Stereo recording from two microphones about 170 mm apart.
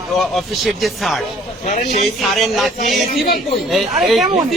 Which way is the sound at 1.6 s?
45° left (ahead or behind).